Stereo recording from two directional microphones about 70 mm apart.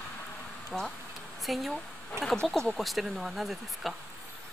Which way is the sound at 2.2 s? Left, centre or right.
Right.